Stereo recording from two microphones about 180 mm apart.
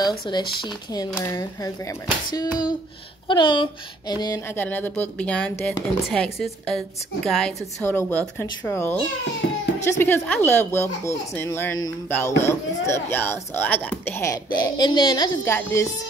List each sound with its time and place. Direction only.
0.3 s speech: 25° left (ahead or behind)
4.6 s speech: 10° left (ahead or behind)